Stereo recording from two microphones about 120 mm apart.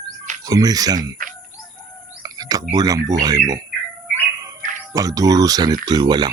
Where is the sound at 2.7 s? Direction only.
30° right (ahead or behind).